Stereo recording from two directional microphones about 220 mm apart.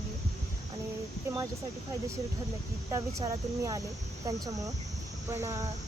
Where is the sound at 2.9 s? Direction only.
15° right (ahead or behind).